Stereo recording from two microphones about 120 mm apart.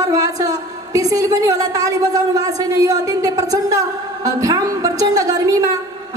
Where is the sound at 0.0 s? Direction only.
30° right (ahead or behind).